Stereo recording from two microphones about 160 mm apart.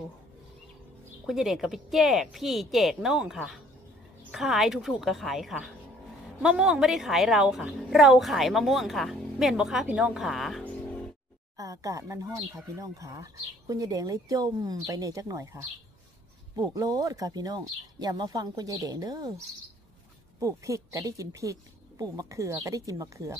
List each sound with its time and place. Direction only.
1.2 s a woman's voice: centre (ahead or behind)
11.5 s speech: 20° right (ahead or behind)
20.3 s speech: 20° right (ahead or behind)